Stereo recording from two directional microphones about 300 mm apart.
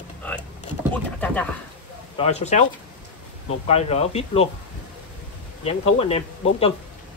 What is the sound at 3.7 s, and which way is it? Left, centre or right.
Speech, left.